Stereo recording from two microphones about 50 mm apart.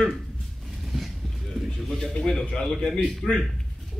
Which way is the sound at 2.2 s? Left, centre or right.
Centre.